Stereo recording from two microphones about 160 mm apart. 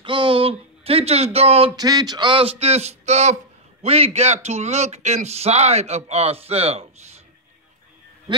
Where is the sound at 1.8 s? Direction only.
25° right (ahead or behind).